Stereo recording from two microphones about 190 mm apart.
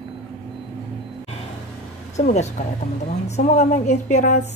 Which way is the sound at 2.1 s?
35° left (ahead or behind).